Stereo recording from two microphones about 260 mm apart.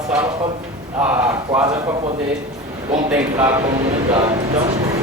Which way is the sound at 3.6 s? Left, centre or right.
Right.